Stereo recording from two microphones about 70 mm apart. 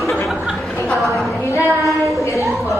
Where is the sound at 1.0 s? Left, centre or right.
Centre.